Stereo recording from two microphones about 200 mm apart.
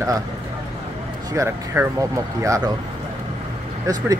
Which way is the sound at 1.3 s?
15° right (ahead or behind).